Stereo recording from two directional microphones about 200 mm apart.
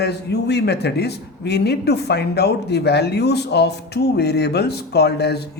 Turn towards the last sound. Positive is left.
turn(degrees=55)  # may be behind; listen again after turning